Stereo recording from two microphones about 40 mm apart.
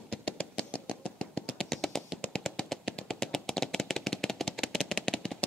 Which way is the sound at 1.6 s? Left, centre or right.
Centre.